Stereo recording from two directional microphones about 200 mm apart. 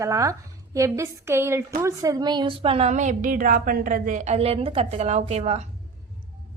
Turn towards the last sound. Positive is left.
turn(degrees=-35)  # may be behind; listen again after turning